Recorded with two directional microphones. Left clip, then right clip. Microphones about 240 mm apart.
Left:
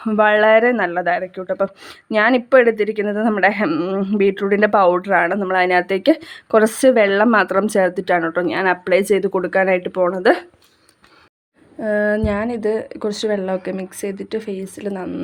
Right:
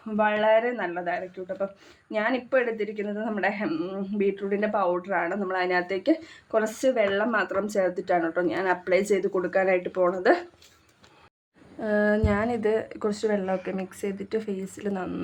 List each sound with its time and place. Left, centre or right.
0.0 s speech: left
11.8 s speech: left